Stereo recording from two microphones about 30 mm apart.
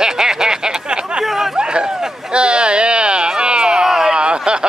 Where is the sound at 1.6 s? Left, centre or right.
Right.